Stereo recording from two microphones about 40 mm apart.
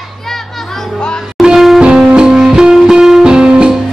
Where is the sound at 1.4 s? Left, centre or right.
Centre.